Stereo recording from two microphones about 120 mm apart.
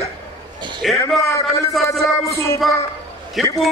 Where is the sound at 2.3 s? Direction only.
25° left (ahead or behind).